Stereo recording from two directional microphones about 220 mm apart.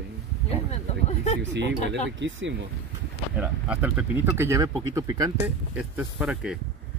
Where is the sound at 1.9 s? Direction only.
55° right (ahead or behind).